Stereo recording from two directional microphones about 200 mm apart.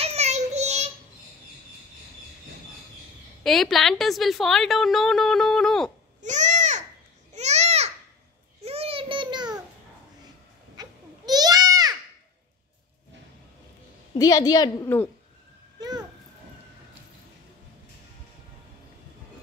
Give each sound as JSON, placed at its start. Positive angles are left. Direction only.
{"t": 0.0, "sound": "child singing", "side_deg": -30}
{"t": 3.4, "sound": "a woman's voice", "side_deg": 0}
{"t": 6.2, "sound": "babbling", "side_deg": -35}
{"t": 10.8, "sound": "babbling", "side_deg": -20}
{"t": 14.1, "sound": "a woman's voice", "side_deg": 20}
{"t": 15.8, "sound": "a sound", "side_deg": -20}